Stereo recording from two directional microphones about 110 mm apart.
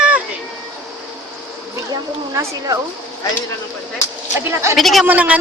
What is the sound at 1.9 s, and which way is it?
Speech, 35° right (ahead or behind).